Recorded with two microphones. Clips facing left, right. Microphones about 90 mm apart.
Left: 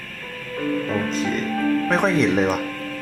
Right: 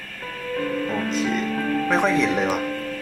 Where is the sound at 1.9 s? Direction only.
Centre (ahead or behind).